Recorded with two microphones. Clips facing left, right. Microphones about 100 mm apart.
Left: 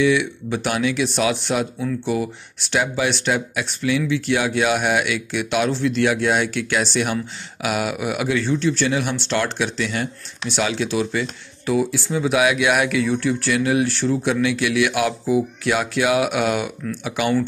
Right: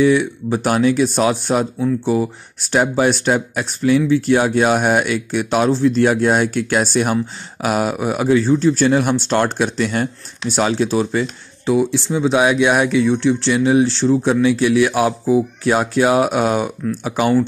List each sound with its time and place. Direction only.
0.0 s speech: 40° right (ahead or behind)
1.8 s speech: 25° right (ahead or behind)
2.6 s speech: 40° right (ahead or behind)
11.6 s speech: 25° right (ahead or behind)